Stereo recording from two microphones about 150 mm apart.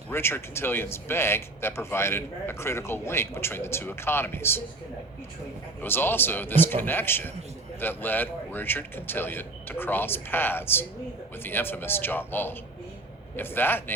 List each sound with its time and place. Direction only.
0.1 s speech: 15° left (ahead or behind)
5.8 s speech: 15° left (ahead or behind)